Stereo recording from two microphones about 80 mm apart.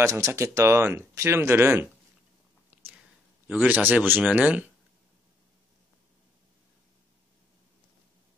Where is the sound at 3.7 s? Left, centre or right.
Right.